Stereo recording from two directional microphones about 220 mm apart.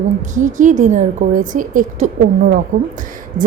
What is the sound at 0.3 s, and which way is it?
A woman's voice, 35° right (ahead or behind).